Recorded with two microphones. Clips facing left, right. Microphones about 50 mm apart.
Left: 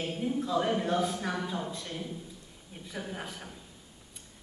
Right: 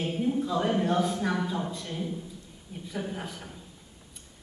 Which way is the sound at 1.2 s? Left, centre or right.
Centre.